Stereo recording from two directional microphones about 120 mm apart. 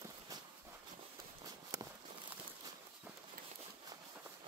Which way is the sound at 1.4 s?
30° right (ahead or behind).